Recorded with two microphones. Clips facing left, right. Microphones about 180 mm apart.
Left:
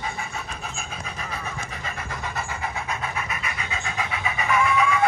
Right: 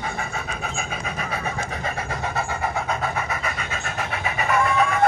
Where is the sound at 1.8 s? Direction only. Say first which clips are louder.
Right 5 dB; 60° right (ahead or behind).